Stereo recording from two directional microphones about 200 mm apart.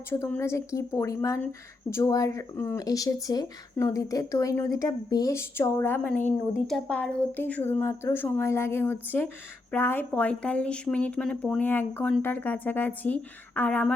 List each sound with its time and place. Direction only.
0.1 s speech: 10° left (ahead or behind)